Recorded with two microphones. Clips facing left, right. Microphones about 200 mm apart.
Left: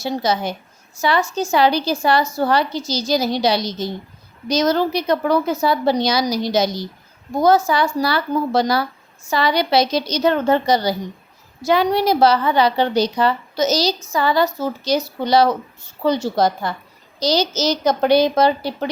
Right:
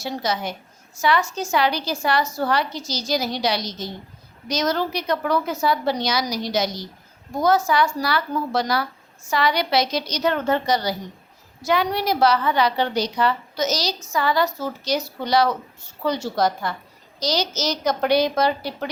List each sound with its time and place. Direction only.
0.0 s a woman's voice: 30° left (ahead or behind)